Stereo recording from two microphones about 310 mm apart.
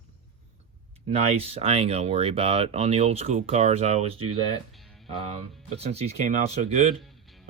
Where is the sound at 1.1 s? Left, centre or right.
Centre.